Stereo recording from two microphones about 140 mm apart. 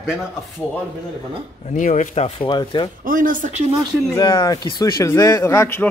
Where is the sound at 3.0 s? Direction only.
75° right (ahead or behind).